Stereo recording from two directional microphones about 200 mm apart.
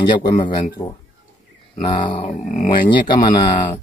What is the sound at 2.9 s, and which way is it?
Speech, 20° left (ahead or behind).